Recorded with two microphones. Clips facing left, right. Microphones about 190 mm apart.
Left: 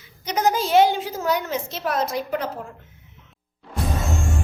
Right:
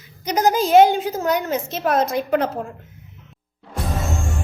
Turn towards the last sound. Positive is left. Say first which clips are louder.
# even
turn(degrees=0)  # may be behind; listen again after turning